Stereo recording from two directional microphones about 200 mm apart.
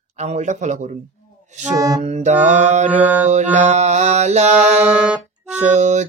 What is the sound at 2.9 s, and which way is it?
Mantra, 10° right (ahead or behind).